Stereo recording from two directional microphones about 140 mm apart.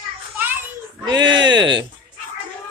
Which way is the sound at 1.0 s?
30° right (ahead or behind).